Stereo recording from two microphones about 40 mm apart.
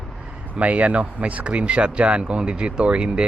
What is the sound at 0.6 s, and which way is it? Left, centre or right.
Speech, right.